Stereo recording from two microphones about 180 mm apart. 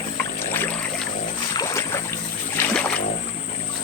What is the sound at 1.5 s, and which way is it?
Boat, 15° left (ahead or behind).